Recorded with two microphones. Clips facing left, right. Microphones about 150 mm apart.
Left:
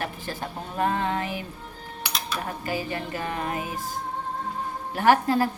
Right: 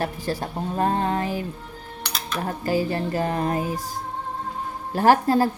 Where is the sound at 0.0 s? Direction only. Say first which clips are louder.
Right 5 dB; 35° right (ahead or behind).